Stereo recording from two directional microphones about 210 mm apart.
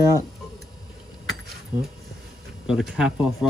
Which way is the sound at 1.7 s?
40° right (ahead or behind).